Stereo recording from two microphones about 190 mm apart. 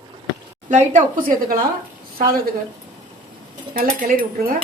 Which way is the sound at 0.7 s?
40° right (ahead or behind).